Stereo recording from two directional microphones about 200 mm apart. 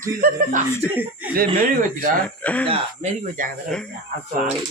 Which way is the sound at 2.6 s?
30° right (ahead or behind).